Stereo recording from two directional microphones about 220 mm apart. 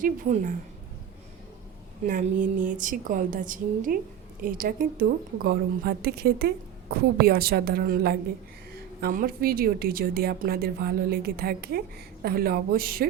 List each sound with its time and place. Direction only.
0.0 s a woman's voice: 35° right (ahead or behind)
2.0 s a woman's voice: 35° right (ahead or behind)